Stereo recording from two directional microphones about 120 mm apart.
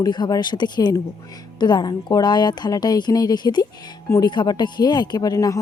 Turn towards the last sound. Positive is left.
turn(degrees=30)  # may be behind; listen again after turning